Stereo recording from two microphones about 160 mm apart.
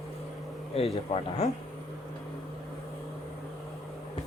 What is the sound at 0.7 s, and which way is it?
Speech, 35° left (ahead or behind).